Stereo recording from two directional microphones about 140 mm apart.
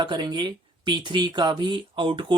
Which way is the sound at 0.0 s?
30° right (ahead or behind).